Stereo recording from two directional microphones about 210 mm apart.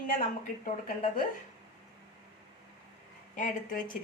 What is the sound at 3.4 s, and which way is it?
Speech, 40° left (ahead or behind).